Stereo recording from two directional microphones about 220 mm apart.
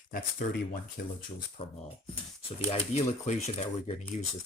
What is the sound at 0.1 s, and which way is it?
Speech, 40° left (ahead or behind).